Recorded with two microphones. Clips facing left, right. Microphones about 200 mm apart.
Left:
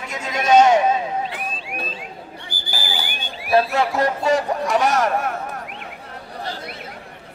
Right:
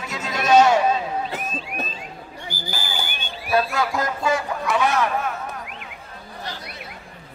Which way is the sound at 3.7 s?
30° left (ahead or behind).